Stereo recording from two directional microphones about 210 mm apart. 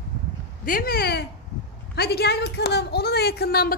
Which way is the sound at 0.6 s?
45° left (ahead or behind).